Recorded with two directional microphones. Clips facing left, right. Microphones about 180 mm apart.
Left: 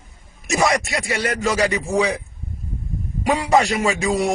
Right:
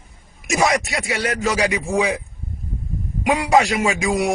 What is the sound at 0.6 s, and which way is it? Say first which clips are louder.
A man's voice: even; 5° right (ahead or behind).